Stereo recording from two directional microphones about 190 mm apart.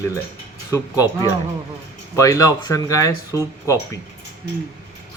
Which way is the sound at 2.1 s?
15° left (ahead or behind).